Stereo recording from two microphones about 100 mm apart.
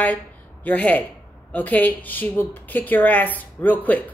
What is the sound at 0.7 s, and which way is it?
A woman's voice, 15° left (ahead or behind).